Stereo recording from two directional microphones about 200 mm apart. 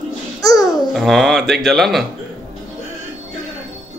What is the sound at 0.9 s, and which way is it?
Speech, centre (ahead or behind).